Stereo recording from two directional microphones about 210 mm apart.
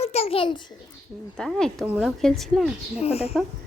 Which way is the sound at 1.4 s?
5° left (ahead or behind).